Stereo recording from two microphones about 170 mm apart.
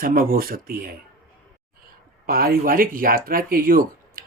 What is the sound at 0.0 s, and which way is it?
Speech, 55° right (ahead or behind).